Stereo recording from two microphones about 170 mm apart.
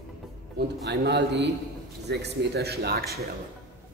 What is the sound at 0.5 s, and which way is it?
A man's voice, 80° right.